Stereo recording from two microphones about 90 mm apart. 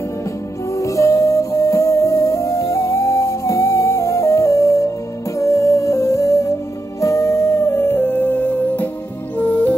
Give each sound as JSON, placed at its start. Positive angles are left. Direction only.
{"t": 0.7, "sound": "music", "side_deg": 35}